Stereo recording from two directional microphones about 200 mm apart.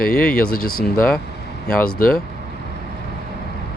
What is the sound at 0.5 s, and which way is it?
Speech, 45° left (ahead or behind).